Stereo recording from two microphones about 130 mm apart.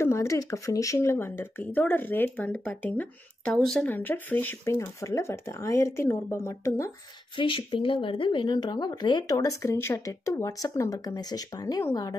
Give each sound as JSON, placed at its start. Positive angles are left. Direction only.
{"t": 0.0, "sound": "speech", "side_deg": 20}
{"t": 3.8, "sound": "speech", "side_deg": 15}
{"t": 4.7, "sound": "speech", "side_deg": 25}
{"t": 7.3, "sound": "speech", "side_deg": 40}